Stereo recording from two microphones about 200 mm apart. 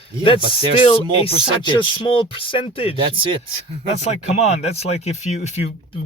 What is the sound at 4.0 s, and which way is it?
Speech, 35° left (ahead or behind).